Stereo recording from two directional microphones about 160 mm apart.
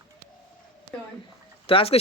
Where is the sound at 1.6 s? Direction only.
35° left (ahead or behind).